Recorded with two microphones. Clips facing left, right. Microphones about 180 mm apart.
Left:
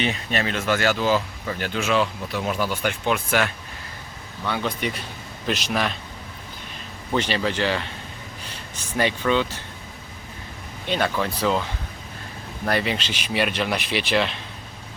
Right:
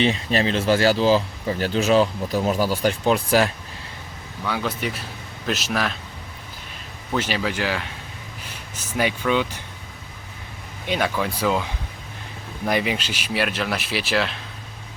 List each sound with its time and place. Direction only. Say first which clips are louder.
0.0 s speech: right 4 dB; 30° right (ahead or behind)
4.4 s speech: even; 5° right (ahead or behind)
7.2 s speech: left 1 dB; 5° right (ahead or behind)
10.8 s speech: even; 10° right (ahead or behind)